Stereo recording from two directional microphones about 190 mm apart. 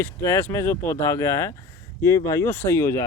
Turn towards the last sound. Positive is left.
turn(degrees=15)  # may be behind; listen again after turning